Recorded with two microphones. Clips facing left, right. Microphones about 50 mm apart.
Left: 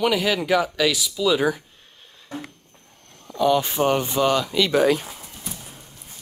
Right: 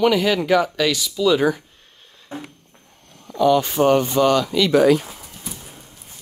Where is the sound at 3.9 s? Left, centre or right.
Centre.